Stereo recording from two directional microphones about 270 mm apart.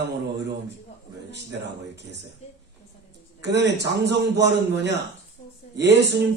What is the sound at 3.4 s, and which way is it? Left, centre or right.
Speech, right.